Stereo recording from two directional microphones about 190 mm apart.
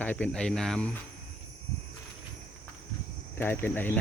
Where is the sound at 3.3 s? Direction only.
10° left (ahead or behind).